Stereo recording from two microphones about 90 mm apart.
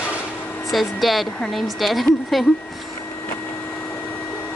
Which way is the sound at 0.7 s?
Centre (ahead or behind).